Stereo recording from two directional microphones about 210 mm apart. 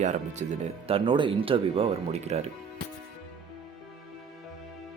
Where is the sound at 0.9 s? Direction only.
25° right (ahead or behind).